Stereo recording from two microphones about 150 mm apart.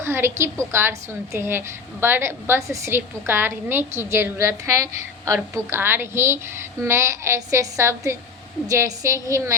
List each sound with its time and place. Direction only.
0.0 s a woman's voice: 15° right (ahead or behind)